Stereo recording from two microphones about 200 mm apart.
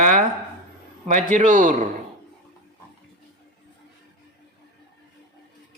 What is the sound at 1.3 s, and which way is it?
Speech, 40° right (ahead or behind).